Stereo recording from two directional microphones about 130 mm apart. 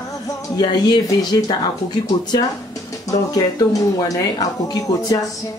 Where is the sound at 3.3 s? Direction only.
30° left (ahead or behind).